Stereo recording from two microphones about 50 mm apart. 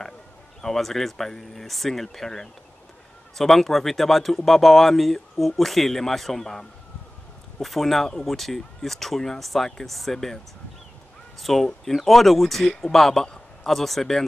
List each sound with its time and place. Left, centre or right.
0.6 s speech: centre
11.4 s speech: centre